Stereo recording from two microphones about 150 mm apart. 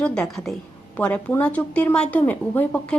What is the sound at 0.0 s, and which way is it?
A woman's voice, 5° left (ahead or behind).